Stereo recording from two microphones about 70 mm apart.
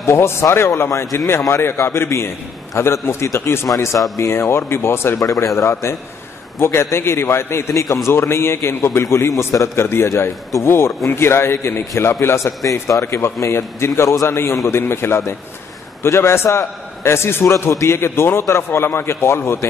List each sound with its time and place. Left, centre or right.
0.0 s a man's voice: left
7.8 s a man's voice: left
8.1 s a man's voice: left